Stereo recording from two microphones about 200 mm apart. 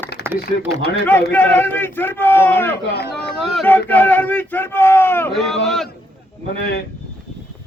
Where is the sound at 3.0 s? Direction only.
55° left (ahead or behind).